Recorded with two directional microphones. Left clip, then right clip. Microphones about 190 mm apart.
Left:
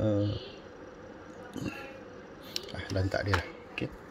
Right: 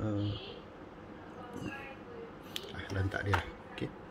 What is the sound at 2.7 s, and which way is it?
Speech, 25° left (ahead or behind).